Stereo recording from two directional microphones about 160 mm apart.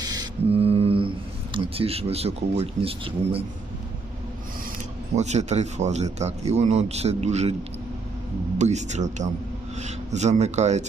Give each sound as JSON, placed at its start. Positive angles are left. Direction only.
{"t": 0.0, "sound": "mantra", "side_deg": -25}
{"t": 0.5, "sound": "mantra", "side_deg": -40}
{"t": 1.5, "sound": "speech", "side_deg": -35}
{"t": 5.1, "sound": "a man's voice", "side_deg": -45}
{"t": 8.5, "sound": "a man's voice", "side_deg": -45}